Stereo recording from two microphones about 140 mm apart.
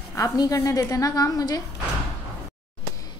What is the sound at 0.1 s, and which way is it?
A woman's voice, 25° left (ahead or behind).